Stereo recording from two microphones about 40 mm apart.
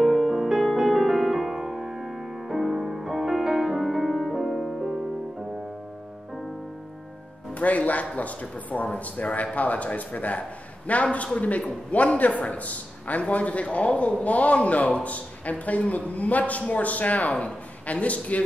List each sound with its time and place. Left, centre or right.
0.0 s music: centre
7.5 s a man's voice: left
17.3 s speech: left